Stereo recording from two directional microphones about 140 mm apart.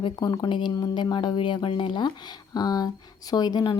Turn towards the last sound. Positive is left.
turn(degrees=30)  # may be behind; listen again after turning